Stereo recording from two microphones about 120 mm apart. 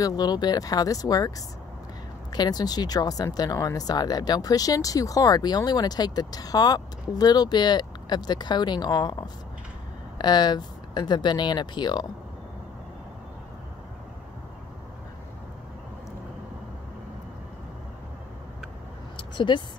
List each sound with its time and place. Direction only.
0.0 s speech: 35° left (ahead or behind)
2.3 s speech: 35° left (ahead or behind)
19.1 s a sound: 40° left (ahead or behind)